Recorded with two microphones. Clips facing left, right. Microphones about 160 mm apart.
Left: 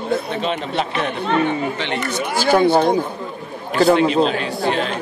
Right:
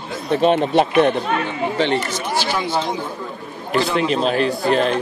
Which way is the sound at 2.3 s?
50° left (ahead or behind).